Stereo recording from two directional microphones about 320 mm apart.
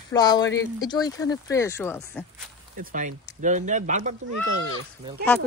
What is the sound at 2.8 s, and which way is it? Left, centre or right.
Speech, right.